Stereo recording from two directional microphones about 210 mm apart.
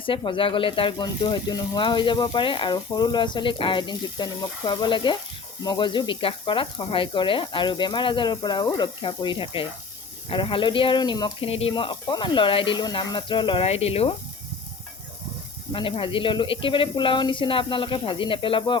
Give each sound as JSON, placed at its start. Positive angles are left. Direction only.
{"t": 0.0, "sound": "speech", "side_deg": 25}
{"t": 15.7, "sound": "speech", "side_deg": 25}